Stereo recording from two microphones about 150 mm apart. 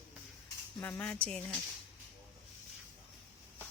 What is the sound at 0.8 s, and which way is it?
Speech, 15° left (ahead or behind).